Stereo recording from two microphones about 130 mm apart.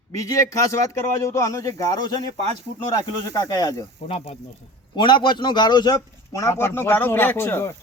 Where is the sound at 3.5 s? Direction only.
25° left (ahead or behind).